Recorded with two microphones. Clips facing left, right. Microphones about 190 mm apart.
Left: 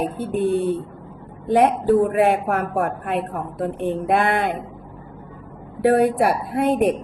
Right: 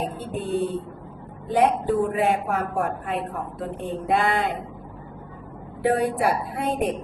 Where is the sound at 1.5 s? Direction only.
60° left (ahead or behind).